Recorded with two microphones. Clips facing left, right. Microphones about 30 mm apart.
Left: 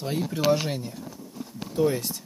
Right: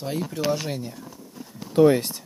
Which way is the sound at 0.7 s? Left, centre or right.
Centre.